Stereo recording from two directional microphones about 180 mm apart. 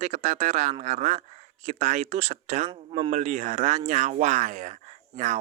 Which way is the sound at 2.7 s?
30° right (ahead or behind).